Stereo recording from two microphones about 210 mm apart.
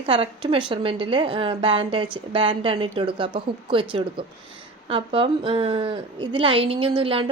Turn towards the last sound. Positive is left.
turn(degrees=-25)  # may be behind; listen again after turning